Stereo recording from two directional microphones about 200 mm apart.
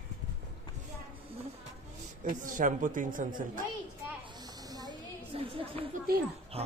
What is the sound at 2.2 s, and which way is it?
Speech, 40° right (ahead or behind).